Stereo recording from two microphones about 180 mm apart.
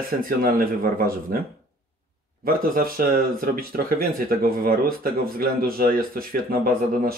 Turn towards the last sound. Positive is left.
turn(degrees=-55)  # may be behind; listen again after turning